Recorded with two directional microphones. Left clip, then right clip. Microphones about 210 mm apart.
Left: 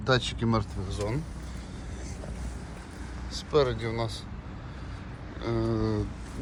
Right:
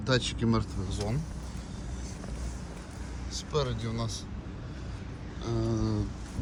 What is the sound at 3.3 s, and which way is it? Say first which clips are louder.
Vehicle: left 7 dB; 20° right (ahead or behind).